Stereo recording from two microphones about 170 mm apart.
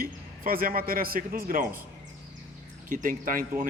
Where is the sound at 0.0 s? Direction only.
60° right (ahead or behind).